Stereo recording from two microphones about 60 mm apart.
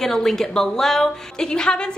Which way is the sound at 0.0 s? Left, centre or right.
Centre.